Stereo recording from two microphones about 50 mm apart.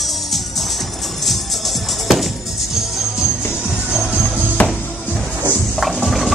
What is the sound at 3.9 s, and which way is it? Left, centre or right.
Music, centre.